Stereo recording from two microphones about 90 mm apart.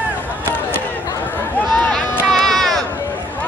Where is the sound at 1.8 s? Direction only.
5° left (ahead or behind).